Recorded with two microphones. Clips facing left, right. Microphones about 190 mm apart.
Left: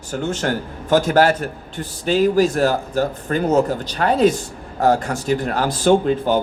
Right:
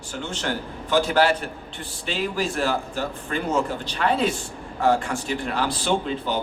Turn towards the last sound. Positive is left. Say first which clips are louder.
# left 9 dB
turn(degrees=45)  # may be behind; listen again after turning